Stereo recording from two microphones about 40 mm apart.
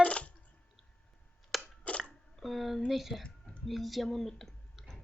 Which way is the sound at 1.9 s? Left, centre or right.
Left.